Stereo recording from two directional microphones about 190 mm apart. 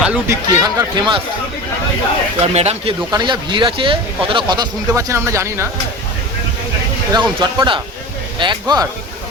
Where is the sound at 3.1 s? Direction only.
25° right (ahead or behind).